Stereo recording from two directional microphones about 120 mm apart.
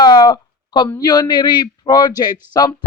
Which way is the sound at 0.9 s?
35° left (ahead or behind).